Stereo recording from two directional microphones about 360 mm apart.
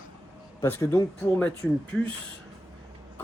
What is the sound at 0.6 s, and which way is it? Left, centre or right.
Speech, centre.